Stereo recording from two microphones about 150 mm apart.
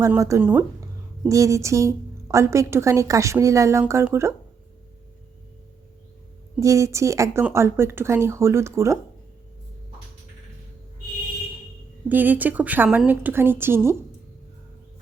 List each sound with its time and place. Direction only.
0.1 s a woman's voice: 20° right (ahead or behind)
6.6 s a woman's voice: 20° right (ahead or behind)
12.0 s a woman's voice: 10° right (ahead or behind)